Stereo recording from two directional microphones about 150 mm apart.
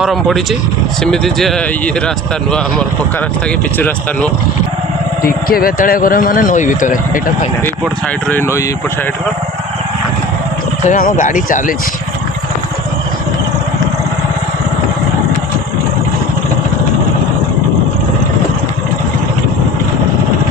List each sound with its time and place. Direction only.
0.0 s speech: centre (ahead or behind)
3.8 s speech: 10° left (ahead or behind)
5.2 s speech: 75° left (ahead or behind); by 7.2 s 60° left (ahead or behind)
8.3 s speech: 15° left (ahead or behind)
10.8 s speech: 65° left (ahead or behind)